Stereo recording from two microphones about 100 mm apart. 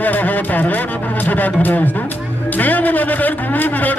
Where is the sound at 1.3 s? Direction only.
15° left (ahead or behind).